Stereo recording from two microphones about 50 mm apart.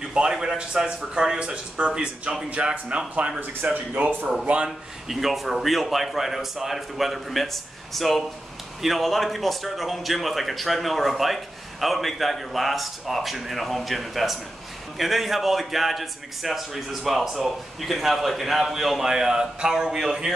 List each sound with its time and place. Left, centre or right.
0.0 s speech: centre
3.7 s speech: right
4.6 s speech: centre